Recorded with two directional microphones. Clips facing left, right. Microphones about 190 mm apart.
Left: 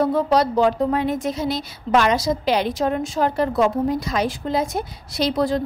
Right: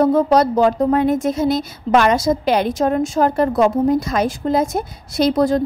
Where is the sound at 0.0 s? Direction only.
45° right (ahead or behind).